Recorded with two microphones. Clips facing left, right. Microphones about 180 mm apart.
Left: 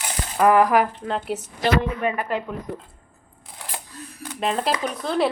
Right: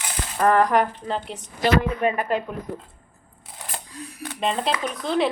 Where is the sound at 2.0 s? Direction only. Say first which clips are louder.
Right 2 dB; 20° right (ahead or behind).